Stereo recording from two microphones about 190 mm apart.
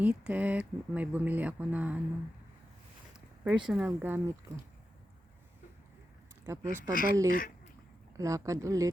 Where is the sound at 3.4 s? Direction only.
5° right (ahead or behind).